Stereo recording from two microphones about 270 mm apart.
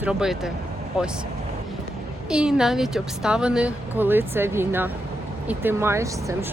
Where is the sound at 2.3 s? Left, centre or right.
Centre.